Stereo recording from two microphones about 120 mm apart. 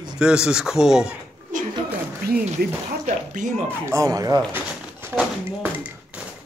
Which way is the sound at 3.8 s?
25° right (ahead or behind).